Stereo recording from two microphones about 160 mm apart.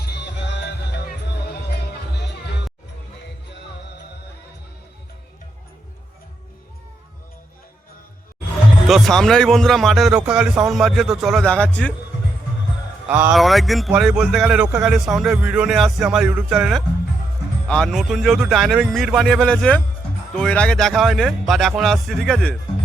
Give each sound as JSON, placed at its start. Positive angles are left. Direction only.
{"t": 0.0, "sound": "music", "side_deg": 90}
{"t": 8.9, "sound": "a man's voice", "side_deg": 0}
{"t": 13.1, "sound": "a man's voice", "side_deg": -10}